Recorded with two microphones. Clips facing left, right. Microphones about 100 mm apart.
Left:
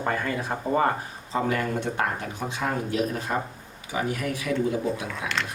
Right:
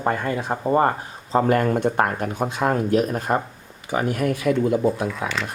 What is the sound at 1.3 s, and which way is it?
Speech, 45° right (ahead or behind).